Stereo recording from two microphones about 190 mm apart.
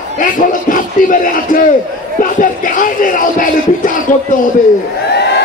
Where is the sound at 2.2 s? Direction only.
45° left (ahead or behind).